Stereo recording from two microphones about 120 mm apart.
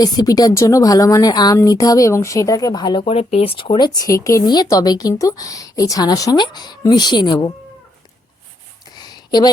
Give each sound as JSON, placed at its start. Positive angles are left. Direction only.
{"t": 0.0, "sound": "speech", "side_deg": 30}
{"t": 3.0, "sound": "speech", "side_deg": 60}
{"t": 4.4, "sound": "speech", "side_deg": 35}
{"t": 9.0, "sound": "a sound", "side_deg": 35}